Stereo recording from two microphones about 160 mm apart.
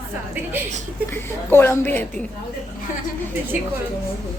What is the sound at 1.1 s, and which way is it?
Speech, 15° left (ahead or behind).